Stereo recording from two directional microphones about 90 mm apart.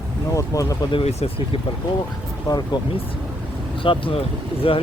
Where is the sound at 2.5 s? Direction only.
45° left (ahead or behind).